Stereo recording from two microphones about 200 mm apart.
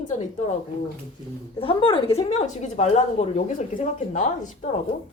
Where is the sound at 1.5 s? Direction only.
25° left (ahead or behind).